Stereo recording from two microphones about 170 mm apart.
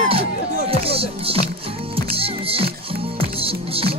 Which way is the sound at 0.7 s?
35° right (ahead or behind).